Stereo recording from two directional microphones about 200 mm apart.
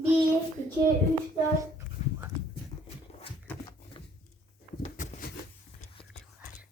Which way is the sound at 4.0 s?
25° left (ahead or behind).